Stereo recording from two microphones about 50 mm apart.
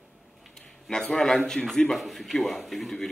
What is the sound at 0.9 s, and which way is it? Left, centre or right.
A man's voice, centre.